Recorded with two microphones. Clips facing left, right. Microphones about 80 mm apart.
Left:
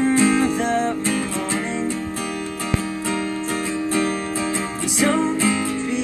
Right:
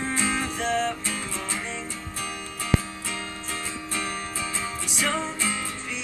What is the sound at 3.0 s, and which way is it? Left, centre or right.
Music, left.